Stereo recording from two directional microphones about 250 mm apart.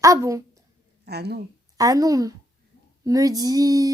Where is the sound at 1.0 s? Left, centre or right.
Right.